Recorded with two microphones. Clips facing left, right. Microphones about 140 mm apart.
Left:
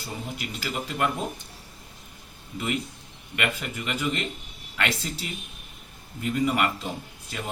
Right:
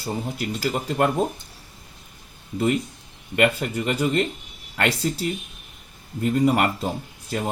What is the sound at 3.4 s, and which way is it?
Speech, 40° right (ahead or behind).